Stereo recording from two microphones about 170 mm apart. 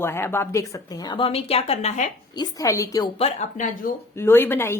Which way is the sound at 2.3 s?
20° left (ahead or behind).